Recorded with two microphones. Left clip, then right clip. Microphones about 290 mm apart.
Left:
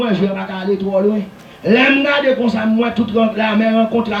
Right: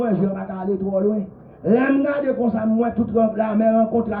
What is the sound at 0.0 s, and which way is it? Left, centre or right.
A man's voice, left.